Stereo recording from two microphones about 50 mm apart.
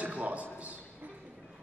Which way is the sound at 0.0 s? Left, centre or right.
Right.